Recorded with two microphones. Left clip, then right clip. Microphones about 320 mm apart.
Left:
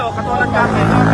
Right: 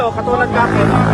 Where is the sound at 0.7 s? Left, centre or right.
Right.